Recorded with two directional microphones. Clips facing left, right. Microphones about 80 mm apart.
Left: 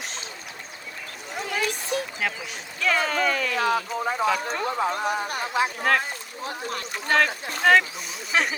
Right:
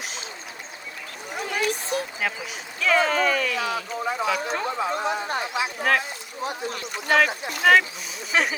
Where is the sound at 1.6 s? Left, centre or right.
Right.